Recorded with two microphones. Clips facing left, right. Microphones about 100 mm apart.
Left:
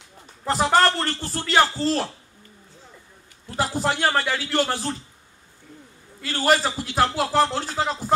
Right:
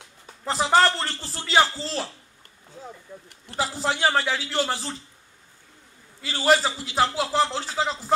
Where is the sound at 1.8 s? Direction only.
55° left (ahead or behind).